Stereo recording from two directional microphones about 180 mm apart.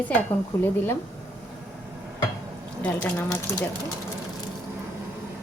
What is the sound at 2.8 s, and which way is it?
Speech, 10° left (ahead or behind).